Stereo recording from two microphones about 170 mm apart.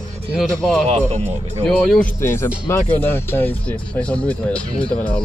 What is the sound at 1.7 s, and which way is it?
Speech, 5° left (ahead or behind).